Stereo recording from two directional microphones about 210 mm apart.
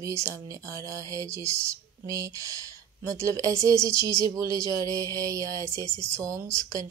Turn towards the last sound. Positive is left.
turn(degrees=-15)  # may be behind; listen again after turning